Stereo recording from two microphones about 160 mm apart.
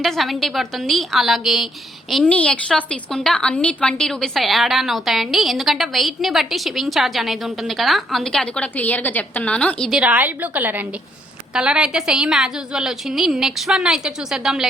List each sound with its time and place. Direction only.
0.0 s a woman's voice: centre (ahead or behind)
10.0 s a woman's voice: 10° right (ahead or behind)